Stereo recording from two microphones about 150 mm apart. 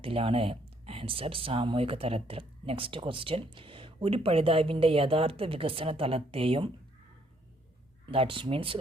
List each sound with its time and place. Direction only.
0.0 s speech: 40° right (ahead or behind)
8.0 s speech: 35° right (ahead or behind)